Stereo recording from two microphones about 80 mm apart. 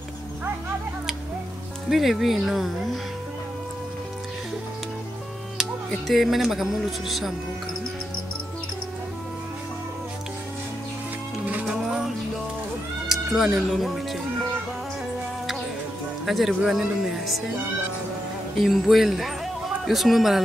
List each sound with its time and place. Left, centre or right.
1.9 s speech: centre
5.9 s speech: centre
11.6 s music: centre
13.1 s speech: centre
16.3 s speech: centre
18.6 s speech: centre